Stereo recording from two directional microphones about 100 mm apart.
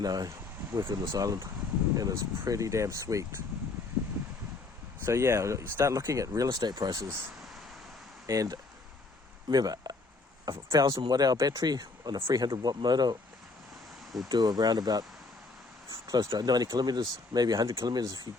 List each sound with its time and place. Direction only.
0.0 s speech: 40° right (ahead or behind)
5.0 s speech: 30° right (ahead or behind)
8.3 s speech: 35° right (ahead or behind)
14.3 s speech: 45° right (ahead or behind)
15.9 s a sound: 40° right (ahead or behind)
16.3 s speech: 40° right (ahead or behind)